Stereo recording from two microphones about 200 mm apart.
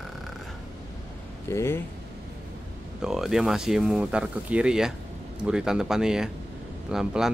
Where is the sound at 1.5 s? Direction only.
10° left (ahead or behind).